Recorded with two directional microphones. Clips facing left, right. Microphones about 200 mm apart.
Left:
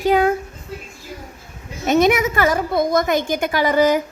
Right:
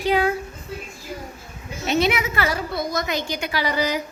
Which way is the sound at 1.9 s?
45° left (ahead or behind).